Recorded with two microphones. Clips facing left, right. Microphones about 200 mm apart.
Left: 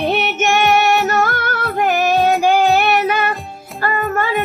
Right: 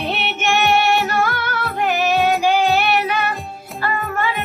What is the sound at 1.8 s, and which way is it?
Child singing, 45° left (ahead or behind).